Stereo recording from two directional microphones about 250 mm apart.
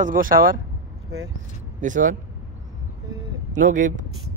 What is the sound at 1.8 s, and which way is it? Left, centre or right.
Speech, right.